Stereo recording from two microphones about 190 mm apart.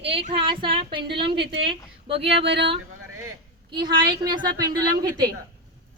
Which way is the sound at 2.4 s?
65° right (ahead or behind).